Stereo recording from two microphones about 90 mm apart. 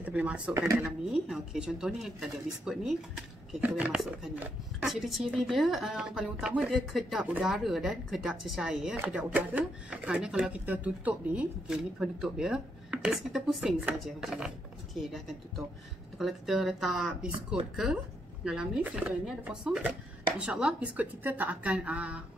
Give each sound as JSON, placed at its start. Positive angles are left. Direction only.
{"t": 0.0, "sound": "speech", "side_deg": -15}
{"t": 3.6, "sound": "speech", "side_deg": -20}
{"t": 3.9, "sound": "speech", "side_deg": 0}
{"t": 8.9, "sound": "speech", "side_deg": -20}
{"t": 11.7, "sound": "speech", "side_deg": -5}